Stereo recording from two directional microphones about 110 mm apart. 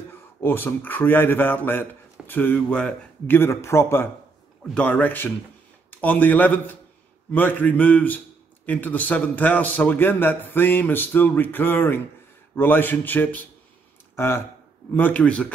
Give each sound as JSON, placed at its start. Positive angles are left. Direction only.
{"t": 0.1, "sound": "a man's voice", "side_deg": 20}
{"t": 3.3, "sound": "a man's voice", "side_deg": 25}